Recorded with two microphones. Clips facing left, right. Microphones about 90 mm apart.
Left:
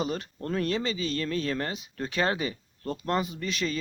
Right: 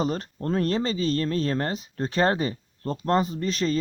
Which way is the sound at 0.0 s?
40° right (ahead or behind).